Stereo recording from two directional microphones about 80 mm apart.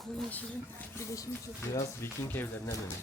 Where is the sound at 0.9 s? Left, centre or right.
Left.